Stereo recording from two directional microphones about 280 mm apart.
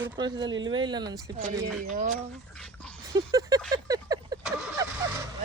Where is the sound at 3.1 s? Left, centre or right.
Centre.